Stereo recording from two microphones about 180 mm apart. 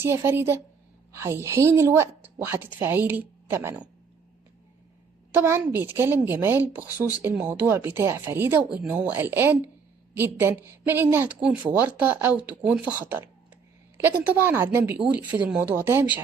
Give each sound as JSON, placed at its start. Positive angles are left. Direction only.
{"t": 0.0, "sound": "speech", "side_deg": -15}
{"t": 5.3, "sound": "speech", "side_deg": -10}